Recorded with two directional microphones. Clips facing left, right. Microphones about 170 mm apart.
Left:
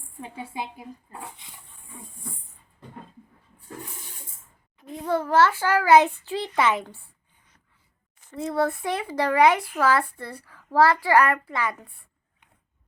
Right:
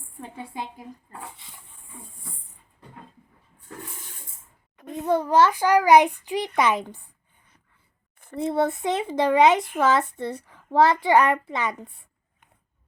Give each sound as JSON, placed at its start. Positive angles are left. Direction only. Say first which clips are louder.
{"t": 0.2, "sound": "a woman's voice", "louder": "left 1 dB", "side_deg": 5}
{"t": 4.9, "sound": "a child's voice", "louder": "right 1 dB", "side_deg": -15}
{"t": 8.4, "sound": "a child's voice", "louder": "right 2 dB", "side_deg": -25}